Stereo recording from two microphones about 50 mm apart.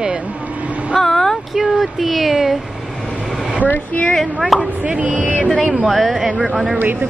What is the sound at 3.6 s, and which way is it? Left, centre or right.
Speech, left.